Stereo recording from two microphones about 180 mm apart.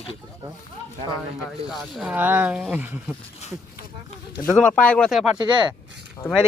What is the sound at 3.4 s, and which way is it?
Speech, 35° left (ahead or behind).